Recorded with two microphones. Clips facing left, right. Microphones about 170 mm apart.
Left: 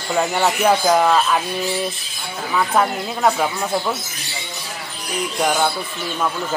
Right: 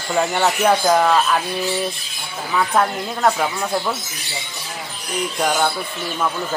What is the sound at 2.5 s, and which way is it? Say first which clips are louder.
Speech: even; 5° left (ahead or behind).